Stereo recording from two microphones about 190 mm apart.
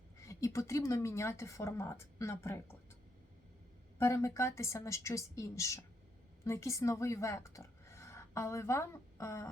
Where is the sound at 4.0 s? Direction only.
15° left (ahead or behind).